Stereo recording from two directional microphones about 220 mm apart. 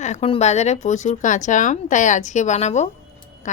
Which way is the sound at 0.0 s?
30° left (ahead or behind).